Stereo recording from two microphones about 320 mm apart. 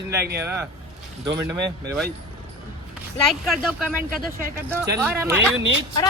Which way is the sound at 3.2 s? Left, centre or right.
Centre.